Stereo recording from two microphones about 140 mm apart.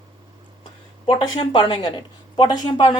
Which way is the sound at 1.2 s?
35° left (ahead or behind).